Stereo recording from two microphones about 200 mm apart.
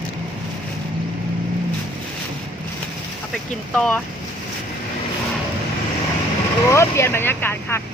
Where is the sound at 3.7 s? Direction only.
5° left (ahead or behind).